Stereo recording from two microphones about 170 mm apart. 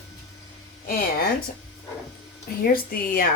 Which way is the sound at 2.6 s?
60° left (ahead or behind).